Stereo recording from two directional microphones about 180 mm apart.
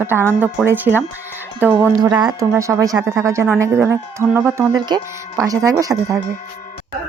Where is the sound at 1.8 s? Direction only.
20° right (ahead or behind).